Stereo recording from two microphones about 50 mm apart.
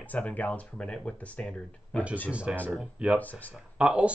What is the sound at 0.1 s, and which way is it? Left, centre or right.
Speech, left.